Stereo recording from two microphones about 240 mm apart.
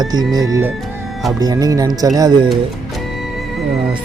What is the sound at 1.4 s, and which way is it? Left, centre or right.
Speech, centre.